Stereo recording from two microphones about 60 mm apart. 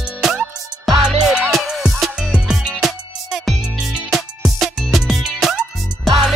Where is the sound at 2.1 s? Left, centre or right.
Centre.